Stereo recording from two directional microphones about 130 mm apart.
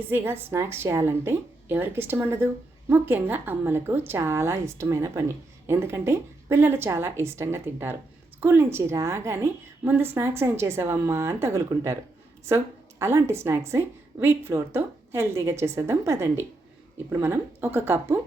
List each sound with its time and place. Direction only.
0.1 s a woman's voice: 15° right (ahead or behind)